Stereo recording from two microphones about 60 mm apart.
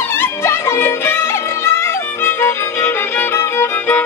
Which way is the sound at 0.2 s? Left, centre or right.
Left.